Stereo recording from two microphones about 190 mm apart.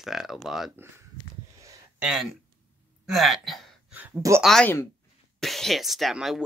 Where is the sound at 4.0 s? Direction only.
15° right (ahead or behind).